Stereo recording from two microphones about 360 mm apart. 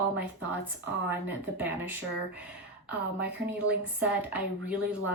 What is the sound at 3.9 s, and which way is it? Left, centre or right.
A woman's voice, centre.